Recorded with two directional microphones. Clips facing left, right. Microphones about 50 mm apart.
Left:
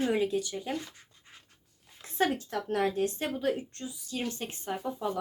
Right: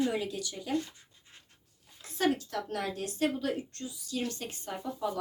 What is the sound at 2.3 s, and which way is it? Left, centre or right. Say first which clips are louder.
Speech: left 4 dB; left.